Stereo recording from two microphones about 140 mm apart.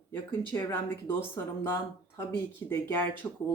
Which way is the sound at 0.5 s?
15° left (ahead or behind).